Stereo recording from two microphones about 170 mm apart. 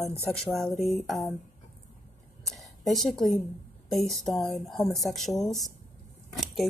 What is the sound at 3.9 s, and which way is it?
Speech, centre (ahead or behind).